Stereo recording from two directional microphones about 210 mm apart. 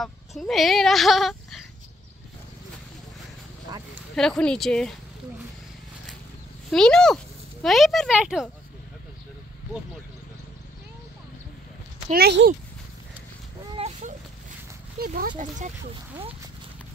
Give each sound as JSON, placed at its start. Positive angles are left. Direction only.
{"t": 0.0, "sound": "speech", "side_deg": 0}
{"t": 4.1, "sound": "speech", "side_deg": 5}
{"t": 6.7, "sound": "speech", "side_deg": 5}
{"t": 12.1, "sound": "speech", "side_deg": -50}
{"t": 13.7, "sound": "a sound", "side_deg": -30}
{"t": 15.0, "sound": "speech", "side_deg": -40}